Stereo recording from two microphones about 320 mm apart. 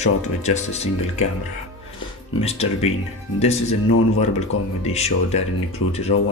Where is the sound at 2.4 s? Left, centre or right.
Centre.